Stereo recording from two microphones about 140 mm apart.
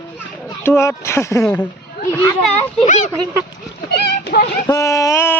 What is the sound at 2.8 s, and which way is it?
Speech, 60° left (ahead or behind).